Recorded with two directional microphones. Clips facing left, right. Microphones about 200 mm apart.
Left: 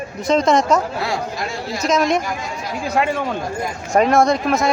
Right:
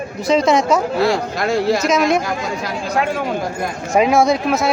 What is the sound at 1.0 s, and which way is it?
Speech, 75° right (ahead or behind).